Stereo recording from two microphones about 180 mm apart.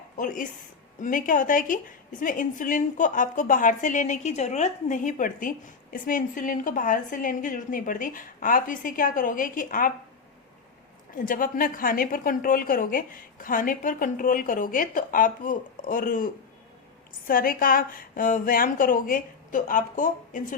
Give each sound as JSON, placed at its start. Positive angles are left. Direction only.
{"t": 0.2, "sound": "a woman's voice", "side_deg": 50}
{"t": 11.1, "sound": "a woman's voice", "side_deg": 50}